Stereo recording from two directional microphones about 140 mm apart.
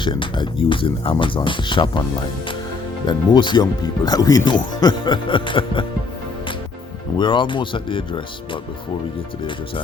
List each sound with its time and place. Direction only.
0.0 s speech: 35° left (ahead or behind)
3.1 s speech: 30° left (ahead or behind)
7.2 s speech: 35° left (ahead or behind)